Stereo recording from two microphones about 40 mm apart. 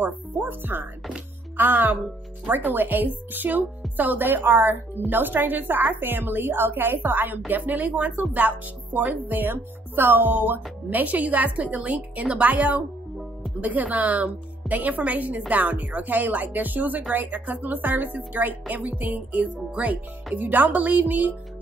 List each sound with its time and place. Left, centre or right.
0.0 s a woman's voice: right
20.3 s speech: right